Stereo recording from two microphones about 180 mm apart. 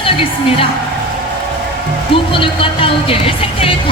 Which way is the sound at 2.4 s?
30° left (ahead or behind).